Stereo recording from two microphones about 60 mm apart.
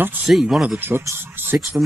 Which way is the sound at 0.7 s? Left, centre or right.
Right.